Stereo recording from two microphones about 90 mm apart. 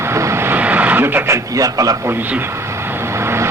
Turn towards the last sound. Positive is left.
turn(degrees=-30)  # may be behind; listen again after turning